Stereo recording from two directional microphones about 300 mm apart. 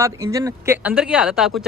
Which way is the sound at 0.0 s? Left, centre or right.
Centre.